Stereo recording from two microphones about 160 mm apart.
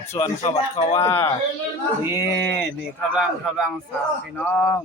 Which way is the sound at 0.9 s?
15° left (ahead or behind).